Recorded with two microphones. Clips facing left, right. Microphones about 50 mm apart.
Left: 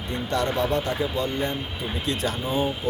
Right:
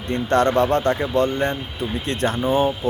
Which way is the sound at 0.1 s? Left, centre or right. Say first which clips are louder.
Right 8 dB; right.